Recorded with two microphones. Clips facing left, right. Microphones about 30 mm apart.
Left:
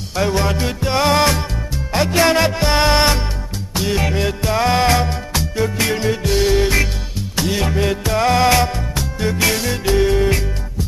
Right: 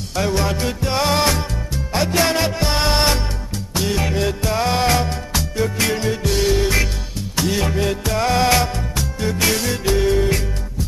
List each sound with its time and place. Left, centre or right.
0.1 s music: centre